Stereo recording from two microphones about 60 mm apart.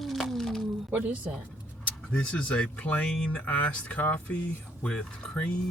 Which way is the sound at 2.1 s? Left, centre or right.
Centre.